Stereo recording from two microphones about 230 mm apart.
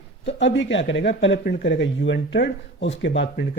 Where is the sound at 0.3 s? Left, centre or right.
Left.